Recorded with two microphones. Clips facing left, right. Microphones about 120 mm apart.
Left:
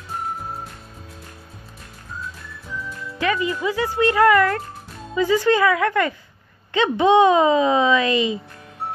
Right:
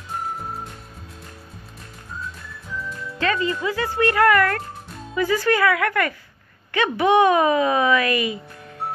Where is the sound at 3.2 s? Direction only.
15° left (ahead or behind).